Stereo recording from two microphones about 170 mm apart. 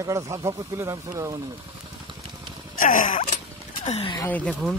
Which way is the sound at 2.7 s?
50° left (ahead or behind).